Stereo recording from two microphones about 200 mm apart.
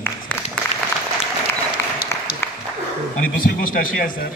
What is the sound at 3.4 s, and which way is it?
Speech, 45° left (ahead or behind).